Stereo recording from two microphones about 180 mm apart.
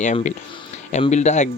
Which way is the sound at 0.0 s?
45° left (ahead or behind).